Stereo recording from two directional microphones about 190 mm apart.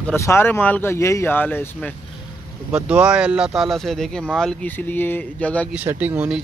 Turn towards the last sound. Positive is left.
turn(degrees=-10)  # may be behind; listen again after turning